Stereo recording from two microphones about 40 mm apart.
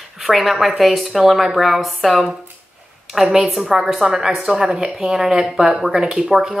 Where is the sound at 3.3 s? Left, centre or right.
Centre.